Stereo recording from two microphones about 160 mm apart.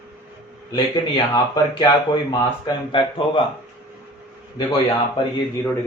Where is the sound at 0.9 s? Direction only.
30° left (ahead or behind).